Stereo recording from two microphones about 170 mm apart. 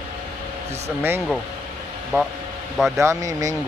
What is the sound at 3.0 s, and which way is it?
Speech, 20° right (ahead or behind).